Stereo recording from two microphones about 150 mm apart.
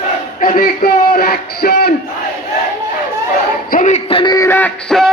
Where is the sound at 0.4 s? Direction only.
70° left (ahead or behind); by 1.9 s 90° left.